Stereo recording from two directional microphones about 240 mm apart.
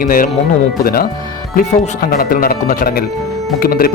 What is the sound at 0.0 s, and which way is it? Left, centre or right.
Speech, left.